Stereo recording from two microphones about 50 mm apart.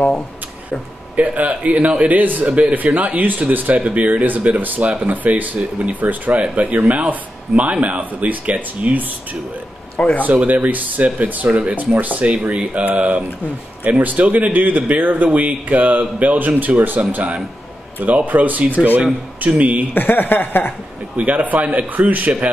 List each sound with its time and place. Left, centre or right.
1.1 s a man's voice: right
5.9 s a man's voice: right
9.9 s speech: left
10.2 s a man's voice: right
12.4 s a man's voice: right
19.9 s speech: left
21.2 s a man's voice: right